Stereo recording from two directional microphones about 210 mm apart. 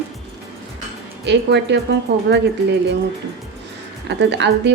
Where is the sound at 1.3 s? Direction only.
55° right (ahead or behind).